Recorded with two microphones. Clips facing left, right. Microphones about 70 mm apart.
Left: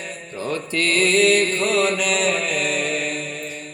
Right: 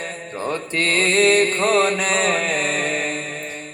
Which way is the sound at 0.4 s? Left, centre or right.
Right.